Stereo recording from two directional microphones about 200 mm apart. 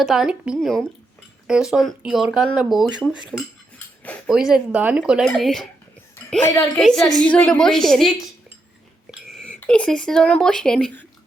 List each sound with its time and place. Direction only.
0.0 s speech: centre (ahead or behind)
6.4 s a woman's voice: 15° left (ahead or behind)
6.7 s speech: centre (ahead or behind)
9.3 s speech: 5° left (ahead or behind)